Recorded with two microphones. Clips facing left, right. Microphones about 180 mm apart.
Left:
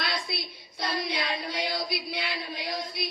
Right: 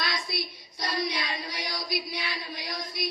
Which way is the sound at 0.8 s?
55° left (ahead or behind).